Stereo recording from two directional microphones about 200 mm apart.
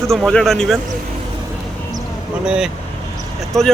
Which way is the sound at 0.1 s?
Centre (ahead or behind).